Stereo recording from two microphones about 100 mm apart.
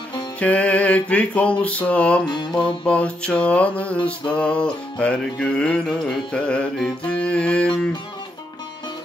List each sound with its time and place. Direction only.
0.4 s music: 15° left (ahead or behind)
2.2 s mantra: 45° left (ahead or behind)
2.8 s music: 10° left (ahead or behind)